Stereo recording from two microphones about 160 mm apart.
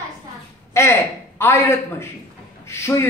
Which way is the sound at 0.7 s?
15° left (ahead or behind).